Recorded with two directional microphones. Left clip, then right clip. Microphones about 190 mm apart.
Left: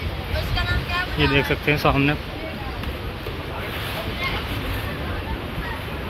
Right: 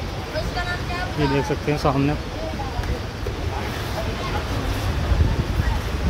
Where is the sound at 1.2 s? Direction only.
5° right (ahead or behind).